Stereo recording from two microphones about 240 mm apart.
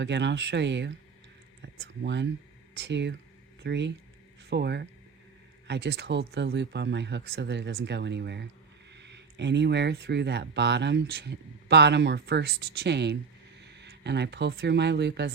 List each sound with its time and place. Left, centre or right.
0.0 s speech: right